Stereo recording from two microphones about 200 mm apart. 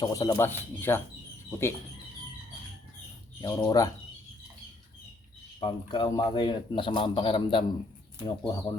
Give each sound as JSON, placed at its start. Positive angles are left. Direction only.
{"t": 0.0, "sound": "speech", "side_deg": 15}
{"t": 3.4, "sound": "speech", "side_deg": 15}
{"t": 5.5, "sound": "a man's voice", "side_deg": 20}